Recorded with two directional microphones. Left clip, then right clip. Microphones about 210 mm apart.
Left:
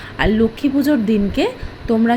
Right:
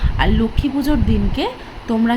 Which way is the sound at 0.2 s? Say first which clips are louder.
Left 3 dB; 10° left (ahead or behind).